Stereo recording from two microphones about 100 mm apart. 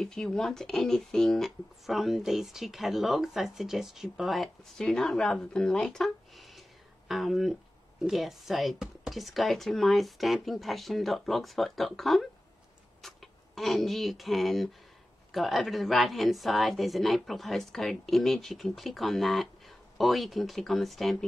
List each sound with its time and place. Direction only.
0.0 s speech: 5° left (ahead or behind)